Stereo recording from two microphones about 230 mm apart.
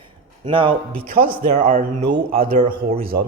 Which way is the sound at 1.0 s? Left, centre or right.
Right.